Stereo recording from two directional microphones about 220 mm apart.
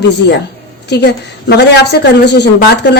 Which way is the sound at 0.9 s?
50° left (ahead or behind).